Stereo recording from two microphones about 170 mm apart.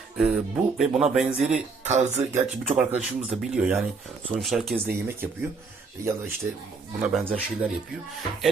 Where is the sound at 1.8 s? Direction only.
40° right (ahead or behind).